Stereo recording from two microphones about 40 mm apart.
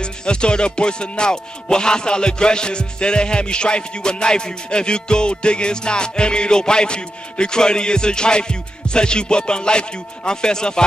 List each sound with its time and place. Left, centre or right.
0.0 s music: left